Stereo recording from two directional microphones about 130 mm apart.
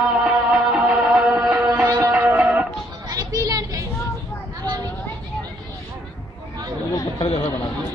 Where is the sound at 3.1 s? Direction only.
30° right (ahead or behind).